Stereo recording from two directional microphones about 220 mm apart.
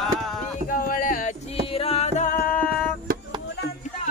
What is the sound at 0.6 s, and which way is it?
Music, 40° left (ahead or behind).